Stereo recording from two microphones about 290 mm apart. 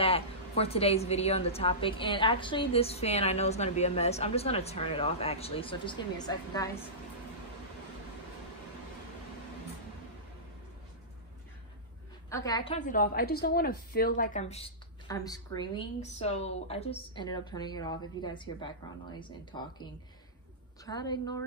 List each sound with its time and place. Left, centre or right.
0.0 s a woman's voice: centre
12.3 s a woman's voice: centre